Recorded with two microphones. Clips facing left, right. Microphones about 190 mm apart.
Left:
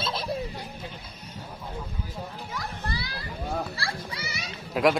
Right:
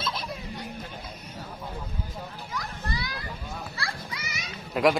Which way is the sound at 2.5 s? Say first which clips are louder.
Right 1 dB; 30° left (ahead or behind).